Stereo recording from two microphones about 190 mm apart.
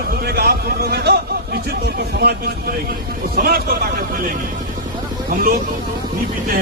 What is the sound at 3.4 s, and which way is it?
Speech, 50° right (ahead or behind).